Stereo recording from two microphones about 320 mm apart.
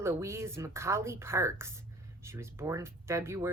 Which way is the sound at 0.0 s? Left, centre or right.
Centre.